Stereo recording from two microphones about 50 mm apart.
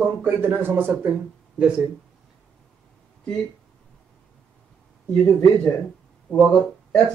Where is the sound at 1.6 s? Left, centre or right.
Centre.